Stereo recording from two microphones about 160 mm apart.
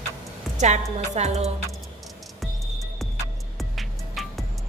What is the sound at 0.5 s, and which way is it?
Speech, 45° right (ahead or behind).